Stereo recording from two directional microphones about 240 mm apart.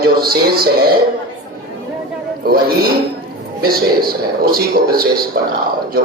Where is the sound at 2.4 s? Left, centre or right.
Right.